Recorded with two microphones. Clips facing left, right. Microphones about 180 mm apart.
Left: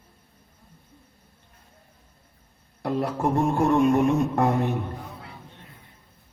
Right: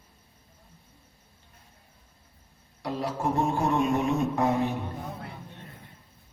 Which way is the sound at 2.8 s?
55° left (ahead or behind).